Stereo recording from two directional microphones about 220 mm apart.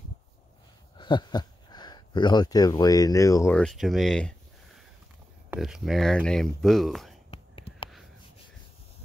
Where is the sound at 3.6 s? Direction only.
Centre (ahead or behind).